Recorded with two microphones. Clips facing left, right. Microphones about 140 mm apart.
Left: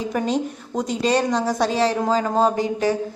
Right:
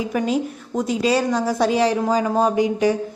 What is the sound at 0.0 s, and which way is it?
A woman's voice, 5° right (ahead or behind).